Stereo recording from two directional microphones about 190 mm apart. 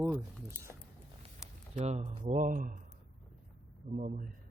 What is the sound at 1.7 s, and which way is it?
Speech, 35° right (ahead or behind).